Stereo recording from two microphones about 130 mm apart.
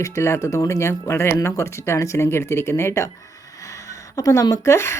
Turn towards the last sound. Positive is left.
turn(degrees=20)  # may be behind; listen again after turning